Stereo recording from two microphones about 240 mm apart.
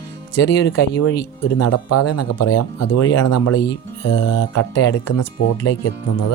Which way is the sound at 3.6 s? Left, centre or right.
Left.